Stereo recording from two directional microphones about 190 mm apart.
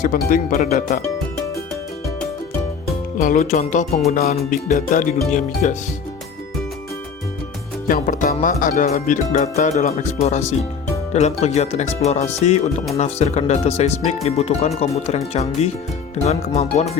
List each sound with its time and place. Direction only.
0.0 s speech: 45° left (ahead or behind)
3.2 s speech: 40° left (ahead or behind)
7.9 s speech: 45° left (ahead or behind)